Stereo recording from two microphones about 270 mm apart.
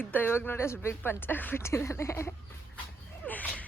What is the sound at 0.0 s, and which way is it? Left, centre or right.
A woman's voice, centre.